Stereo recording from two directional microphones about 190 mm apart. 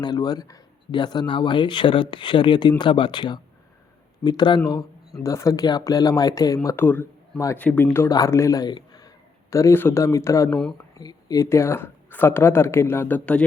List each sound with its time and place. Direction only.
0.0 s speech: 20° left (ahead or behind)